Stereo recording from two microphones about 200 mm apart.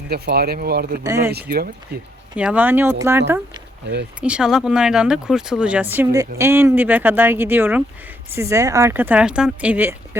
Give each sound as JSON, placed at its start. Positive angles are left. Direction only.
{"t": 0.1, "sound": "speech", "side_deg": -50}
{"t": 1.0, "sound": "speech", "side_deg": -15}
{"t": 1.3, "sound": "speech", "side_deg": -50}
{"t": 2.3, "sound": "speech", "side_deg": -5}